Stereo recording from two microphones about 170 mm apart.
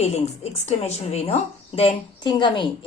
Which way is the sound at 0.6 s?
40° left (ahead or behind).